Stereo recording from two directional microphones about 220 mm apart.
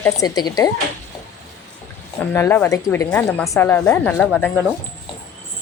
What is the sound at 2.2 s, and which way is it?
Speech, 10° left (ahead or behind).